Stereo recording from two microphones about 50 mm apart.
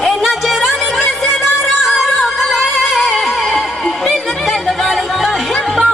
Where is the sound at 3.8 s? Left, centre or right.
Centre.